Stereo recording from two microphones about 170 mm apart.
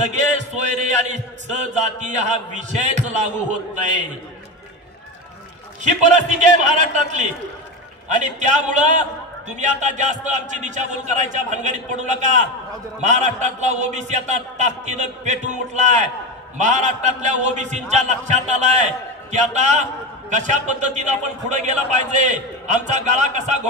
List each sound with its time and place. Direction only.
0.0 s chant: 45° right (ahead or behind)
5.8 s a man's voice: 45° right (ahead or behind)